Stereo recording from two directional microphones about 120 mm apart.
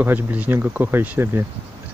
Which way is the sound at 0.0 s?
15° right (ahead or behind).